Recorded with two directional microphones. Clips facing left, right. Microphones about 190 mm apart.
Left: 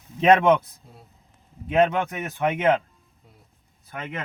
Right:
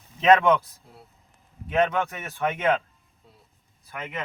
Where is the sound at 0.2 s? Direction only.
25° left (ahead or behind).